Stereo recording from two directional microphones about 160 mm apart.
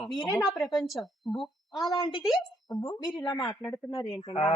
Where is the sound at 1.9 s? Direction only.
30° left (ahead or behind).